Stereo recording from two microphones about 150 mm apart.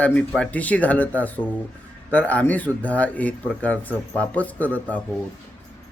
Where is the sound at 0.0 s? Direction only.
10° left (ahead or behind).